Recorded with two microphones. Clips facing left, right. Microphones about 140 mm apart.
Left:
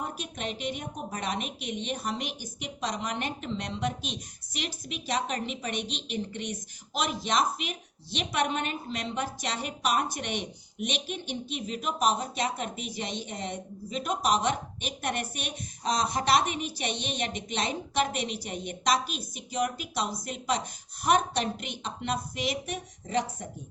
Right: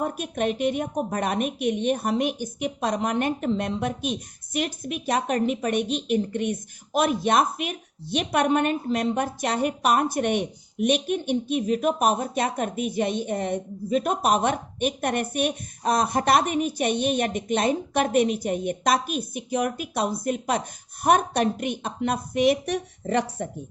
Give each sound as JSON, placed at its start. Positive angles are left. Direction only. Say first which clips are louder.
{"t": 0.0, "sound": "a woman's voice", "louder": "right 9 dB", "side_deg": -50}